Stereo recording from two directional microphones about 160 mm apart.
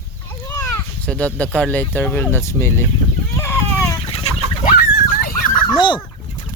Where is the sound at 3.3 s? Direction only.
15° left (ahead or behind).